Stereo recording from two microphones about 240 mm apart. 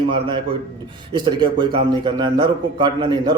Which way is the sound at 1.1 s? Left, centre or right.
Centre.